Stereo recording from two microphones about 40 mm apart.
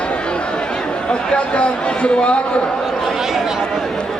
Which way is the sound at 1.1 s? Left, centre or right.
Left.